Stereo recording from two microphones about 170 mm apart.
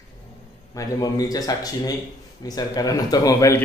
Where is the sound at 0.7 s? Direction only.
20° left (ahead or behind).